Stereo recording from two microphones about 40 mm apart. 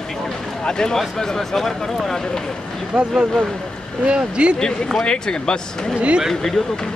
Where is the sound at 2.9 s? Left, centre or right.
Right.